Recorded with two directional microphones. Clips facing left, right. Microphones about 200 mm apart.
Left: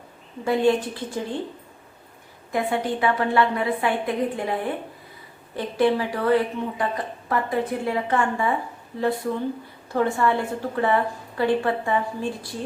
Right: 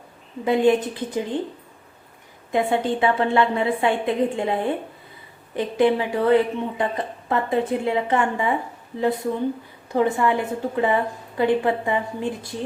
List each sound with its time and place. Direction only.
0.4 s a woman's voice: 20° right (ahead or behind)
2.5 s a woman's voice: 25° right (ahead or behind)
9.9 s a woman's voice: 15° right (ahead or behind)